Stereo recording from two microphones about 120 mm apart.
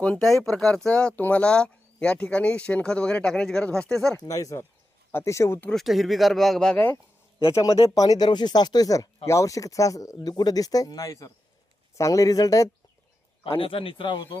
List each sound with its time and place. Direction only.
0.0 s speech: 5° left (ahead or behind)
4.2 s speech: 30° left (ahead or behind)
5.6 s speech: centre (ahead or behind)
7.9 s speech: 30° left (ahead or behind)
13.6 s a man's voice: 50° left (ahead or behind)